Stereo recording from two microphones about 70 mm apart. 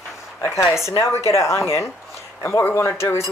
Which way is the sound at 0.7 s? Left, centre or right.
Left.